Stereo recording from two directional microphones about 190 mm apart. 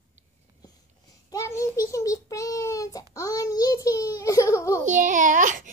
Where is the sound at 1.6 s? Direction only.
15° left (ahead or behind).